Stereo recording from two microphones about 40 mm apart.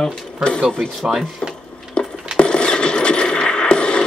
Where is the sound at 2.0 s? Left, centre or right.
Left.